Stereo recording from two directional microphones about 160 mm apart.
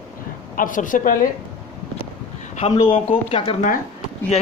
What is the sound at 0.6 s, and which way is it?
Speech, 55° left (ahead or behind).